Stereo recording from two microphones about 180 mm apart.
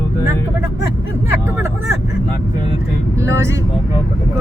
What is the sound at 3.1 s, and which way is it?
Speech, 15° right (ahead or behind).